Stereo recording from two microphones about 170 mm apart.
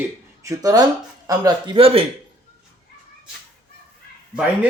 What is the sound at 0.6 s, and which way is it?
Speech, 20° right (ahead or behind).